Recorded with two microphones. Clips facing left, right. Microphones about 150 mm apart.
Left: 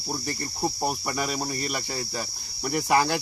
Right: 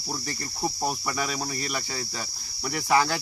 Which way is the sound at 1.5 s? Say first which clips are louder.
Left 2 dB; 35° left (ahead or behind).